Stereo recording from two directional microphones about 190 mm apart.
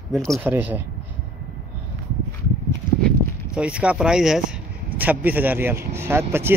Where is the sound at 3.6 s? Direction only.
5° right (ahead or behind).